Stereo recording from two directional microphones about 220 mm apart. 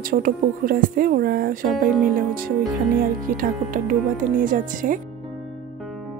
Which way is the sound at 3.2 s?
40° right (ahead or behind).